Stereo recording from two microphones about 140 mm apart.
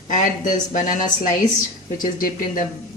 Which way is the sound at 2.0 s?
80° left.